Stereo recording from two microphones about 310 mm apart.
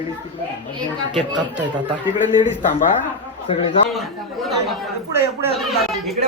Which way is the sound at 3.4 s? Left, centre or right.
Centre.